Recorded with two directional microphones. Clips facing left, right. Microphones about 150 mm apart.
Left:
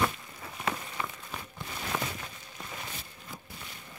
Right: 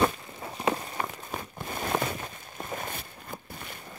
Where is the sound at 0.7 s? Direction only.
40° right (ahead or behind).